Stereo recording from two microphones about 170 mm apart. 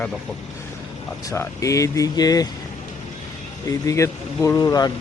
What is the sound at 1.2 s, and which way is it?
Speech, 15° left (ahead or behind).